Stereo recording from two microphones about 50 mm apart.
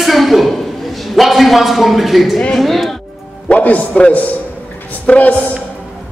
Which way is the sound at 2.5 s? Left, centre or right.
Centre.